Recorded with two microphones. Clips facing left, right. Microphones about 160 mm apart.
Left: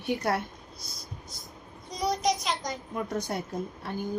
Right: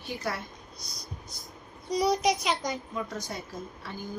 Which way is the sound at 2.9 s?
60° left (ahead or behind).